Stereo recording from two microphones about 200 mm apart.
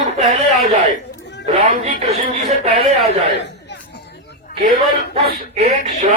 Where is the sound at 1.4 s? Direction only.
35° right (ahead or behind).